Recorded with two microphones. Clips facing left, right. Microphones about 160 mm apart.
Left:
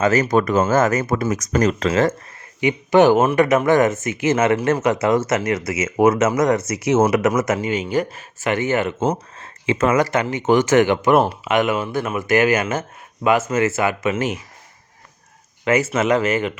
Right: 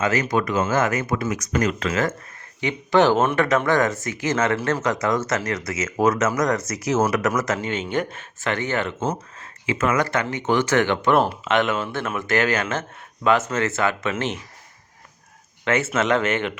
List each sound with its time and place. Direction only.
0.0 s speech: 45° left (ahead or behind)
2.6 s speech: 15° left (ahead or behind)
7.6 s speech: 5° left (ahead or behind)
8.4 s speech: 15° left (ahead or behind)
9.7 s speech: 30° left (ahead or behind)
10.0 s speech: 15° left (ahead or behind)
13.5 s speech: 5° left (ahead or behind)
15.6 s speech: 5° left (ahead or behind)